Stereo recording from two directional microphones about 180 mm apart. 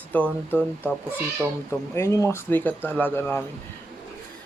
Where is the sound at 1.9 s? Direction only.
15° left (ahead or behind).